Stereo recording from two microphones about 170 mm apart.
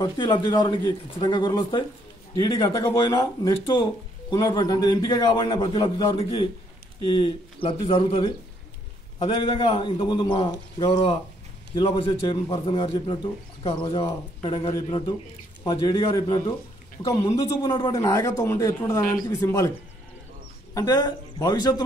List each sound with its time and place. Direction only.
0.0 s a man's voice: 30° left (ahead or behind)
20.7 s a man's voice: 20° left (ahead or behind)